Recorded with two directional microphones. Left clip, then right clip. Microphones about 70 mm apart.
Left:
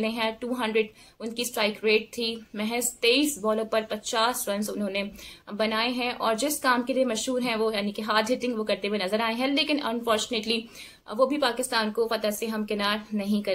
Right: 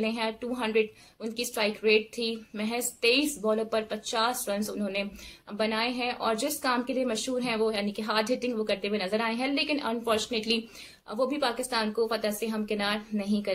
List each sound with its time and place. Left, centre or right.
0.0 s a woman's voice: left